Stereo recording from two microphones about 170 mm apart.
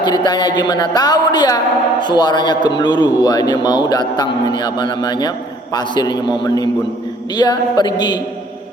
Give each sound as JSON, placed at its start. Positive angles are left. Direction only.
{"t": 0.0, "sound": "a woman's voice", "side_deg": 25}